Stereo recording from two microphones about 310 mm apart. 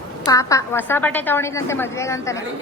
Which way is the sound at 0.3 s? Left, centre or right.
Centre.